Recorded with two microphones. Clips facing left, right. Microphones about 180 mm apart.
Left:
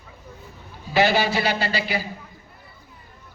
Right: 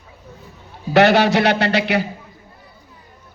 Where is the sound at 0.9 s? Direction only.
70° right (ahead or behind).